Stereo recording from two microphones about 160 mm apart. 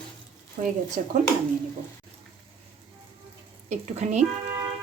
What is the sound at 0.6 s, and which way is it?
Speech, 55° right (ahead or behind).